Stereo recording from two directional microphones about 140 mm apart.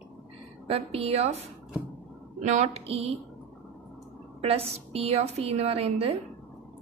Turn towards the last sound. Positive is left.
turn(degrees=-45)  # may be behind; listen again after turning